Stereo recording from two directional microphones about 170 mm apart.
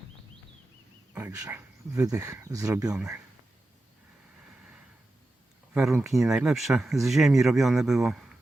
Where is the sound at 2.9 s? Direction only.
5° right (ahead or behind).